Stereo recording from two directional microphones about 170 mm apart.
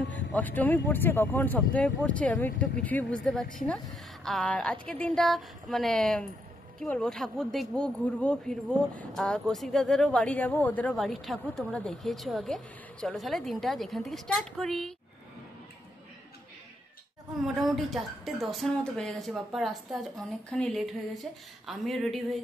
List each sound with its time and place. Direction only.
0.1 s speech: 10° left (ahead or behind)
17.6 s speech: centre (ahead or behind)